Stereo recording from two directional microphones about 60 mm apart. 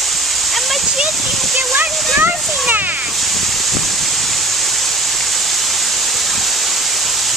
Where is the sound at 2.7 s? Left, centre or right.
Right.